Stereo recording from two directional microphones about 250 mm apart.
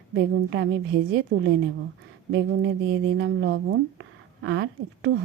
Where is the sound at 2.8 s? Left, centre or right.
Right.